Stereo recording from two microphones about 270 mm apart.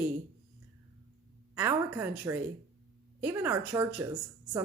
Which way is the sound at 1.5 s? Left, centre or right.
Centre.